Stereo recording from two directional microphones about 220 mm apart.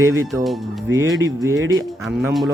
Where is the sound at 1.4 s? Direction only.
15° right (ahead or behind).